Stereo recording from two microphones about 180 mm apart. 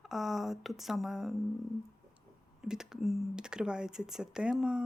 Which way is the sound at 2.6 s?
5° right (ahead or behind).